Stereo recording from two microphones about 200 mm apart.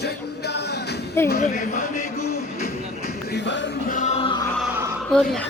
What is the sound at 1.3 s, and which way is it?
Speech, 40° left (ahead or behind).